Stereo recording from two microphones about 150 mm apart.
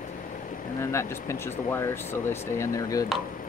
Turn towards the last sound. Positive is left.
turn(degrees=20)  # may be behind; listen again after turning